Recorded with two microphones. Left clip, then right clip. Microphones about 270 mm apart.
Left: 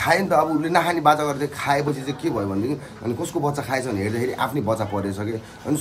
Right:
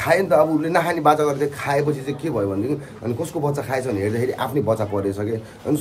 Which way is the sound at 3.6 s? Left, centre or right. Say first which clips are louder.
Right 2 dB; centre.